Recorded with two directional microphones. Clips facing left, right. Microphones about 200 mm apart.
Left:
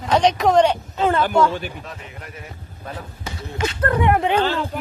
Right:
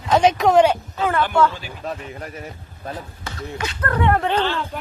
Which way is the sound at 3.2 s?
20° left (ahead or behind).